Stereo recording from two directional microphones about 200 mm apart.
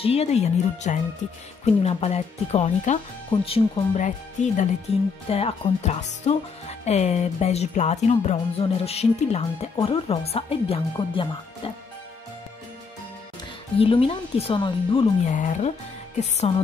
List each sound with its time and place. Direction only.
0.0 s speech: 30° left (ahead or behind)
13.7 s speech: 25° left (ahead or behind)
15.2 s speech: 40° left (ahead or behind)